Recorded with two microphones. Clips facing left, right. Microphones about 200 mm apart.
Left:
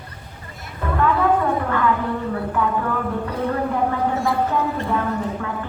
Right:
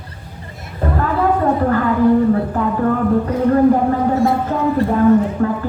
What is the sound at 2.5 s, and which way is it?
Speech, 40° right (ahead or behind).